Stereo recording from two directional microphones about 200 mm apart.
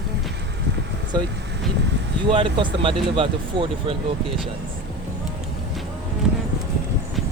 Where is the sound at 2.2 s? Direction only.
25° right (ahead or behind).